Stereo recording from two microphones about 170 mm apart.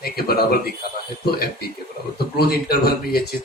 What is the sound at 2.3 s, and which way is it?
Speech, 65° left (ahead or behind).